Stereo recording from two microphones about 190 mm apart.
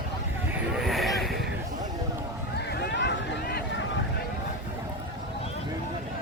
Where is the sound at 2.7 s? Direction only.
60° left (ahead or behind).